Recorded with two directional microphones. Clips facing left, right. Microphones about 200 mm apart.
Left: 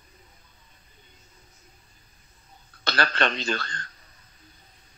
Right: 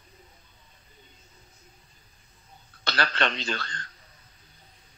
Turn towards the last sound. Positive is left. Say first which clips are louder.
# left 3 dB
turn(degrees=45)  # may be behind; listen again after turning